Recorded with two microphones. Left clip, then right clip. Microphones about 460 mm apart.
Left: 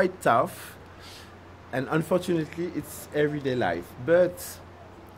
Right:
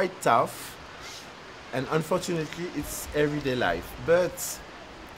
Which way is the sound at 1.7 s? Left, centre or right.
Left.